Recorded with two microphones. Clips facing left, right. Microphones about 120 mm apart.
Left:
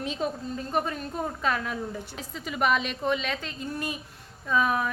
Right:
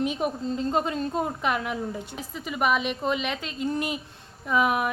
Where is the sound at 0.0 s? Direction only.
15° right (ahead or behind).